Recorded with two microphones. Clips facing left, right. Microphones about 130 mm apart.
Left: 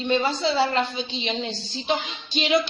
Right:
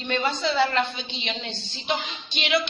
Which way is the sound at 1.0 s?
35° left (ahead or behind).